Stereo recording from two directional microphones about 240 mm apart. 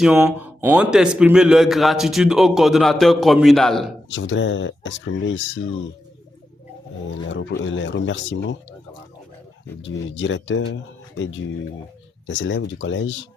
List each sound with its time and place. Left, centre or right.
0.0 s a man's voice: centre
4.1 s speech: left
7.1 s speech: left
9.8 s speech: left
12.3 s speech: left